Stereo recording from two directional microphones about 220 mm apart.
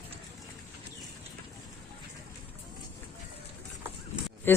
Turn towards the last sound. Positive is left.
turn(degrees=10)  # may be behind; listen again after turning